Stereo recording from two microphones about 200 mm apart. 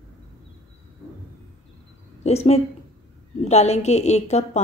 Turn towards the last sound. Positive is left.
turn(degrees=35)  # may be behind; listen again after turning